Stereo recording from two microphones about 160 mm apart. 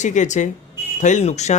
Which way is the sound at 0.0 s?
50° left (ahead or behind).